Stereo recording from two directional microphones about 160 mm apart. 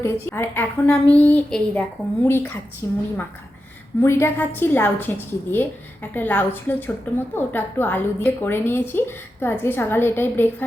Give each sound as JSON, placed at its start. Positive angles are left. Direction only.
{"t": 0.0, "sound": "a woman's voice", "side_deg": 15}
{"t": 4.0, "sound": "a woman's voice", "side_deg": 15}